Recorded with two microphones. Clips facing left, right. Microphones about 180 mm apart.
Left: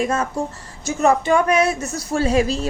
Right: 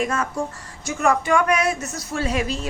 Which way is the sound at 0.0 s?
25° left (ahead or behind).